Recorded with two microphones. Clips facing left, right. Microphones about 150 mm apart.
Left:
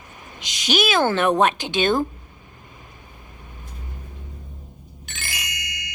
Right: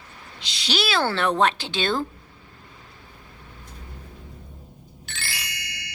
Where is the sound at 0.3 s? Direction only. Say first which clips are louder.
Left 5 dB; 15° left (ahead or behind).